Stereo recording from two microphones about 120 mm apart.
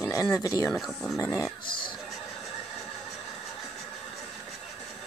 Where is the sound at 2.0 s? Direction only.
Centre (ahead or behind).